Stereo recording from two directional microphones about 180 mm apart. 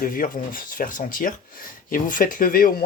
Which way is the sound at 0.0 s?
50° left (ahead or behind).